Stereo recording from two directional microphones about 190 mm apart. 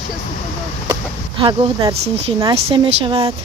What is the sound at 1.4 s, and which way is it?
Speech, 20° right (ahead or behind).